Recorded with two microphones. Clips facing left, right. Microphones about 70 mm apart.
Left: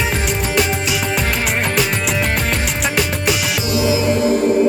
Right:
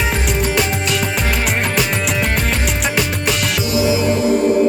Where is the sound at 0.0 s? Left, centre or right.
Centre.